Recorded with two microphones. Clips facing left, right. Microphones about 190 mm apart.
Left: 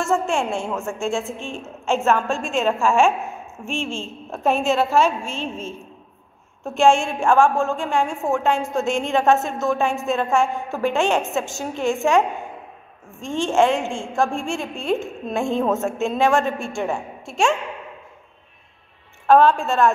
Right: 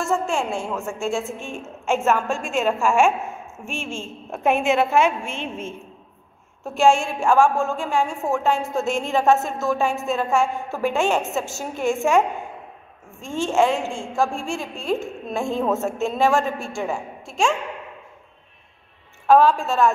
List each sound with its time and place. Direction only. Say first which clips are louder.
0.0 s a woman's voice: left 2 dB; centre (ahead or behind)
5.0 s a woman's voice: even; 55° right (ahead or behind)
6.6 s a woman's voice: left 1 dB; 5° right (ahead or behind)
13.2 s a woman's voice: left 1 dB; 5° right (ahead or behind)
19.2 s a woman's voice: left 1 dB; 5° right (ahead or behind)